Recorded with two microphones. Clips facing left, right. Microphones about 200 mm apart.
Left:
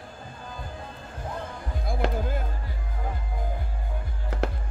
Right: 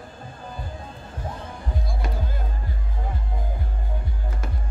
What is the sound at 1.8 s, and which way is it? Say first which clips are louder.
Music: left 9 dB; 55° left (ahead or behind).